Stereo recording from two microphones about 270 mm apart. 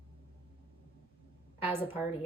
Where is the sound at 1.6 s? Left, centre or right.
Centre.